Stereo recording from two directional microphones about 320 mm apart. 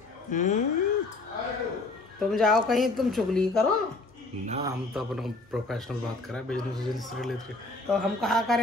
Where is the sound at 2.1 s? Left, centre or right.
Centre.